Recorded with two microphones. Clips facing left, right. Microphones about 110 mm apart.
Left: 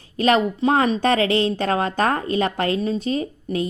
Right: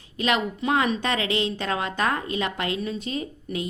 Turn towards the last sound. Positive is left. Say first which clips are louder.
# left 6 dB
turn(degrees=35)  # may be behind; listen again after turning